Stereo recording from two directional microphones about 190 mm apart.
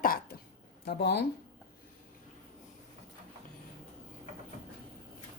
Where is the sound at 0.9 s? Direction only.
60° left (ahead or behind).